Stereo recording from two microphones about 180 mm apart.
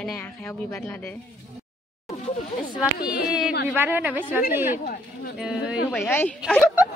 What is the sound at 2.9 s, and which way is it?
Speech, 60° left (ahead or behind).